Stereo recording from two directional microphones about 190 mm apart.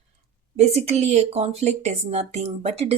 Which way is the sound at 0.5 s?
35° right (ahead or behind).